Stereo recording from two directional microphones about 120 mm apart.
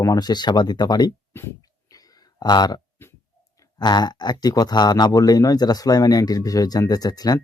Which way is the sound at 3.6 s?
35° left (ahead or behind).